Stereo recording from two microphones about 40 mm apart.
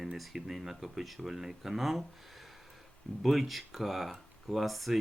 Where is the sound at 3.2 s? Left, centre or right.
Centre.